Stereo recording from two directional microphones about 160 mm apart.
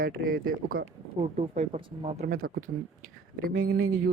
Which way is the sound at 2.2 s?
60° right (ahead or behind).